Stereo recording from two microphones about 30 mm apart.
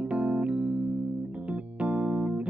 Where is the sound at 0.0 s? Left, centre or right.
Right.